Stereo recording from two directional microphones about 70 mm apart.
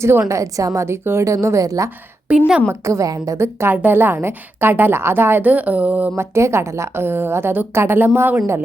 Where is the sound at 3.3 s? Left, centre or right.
Right.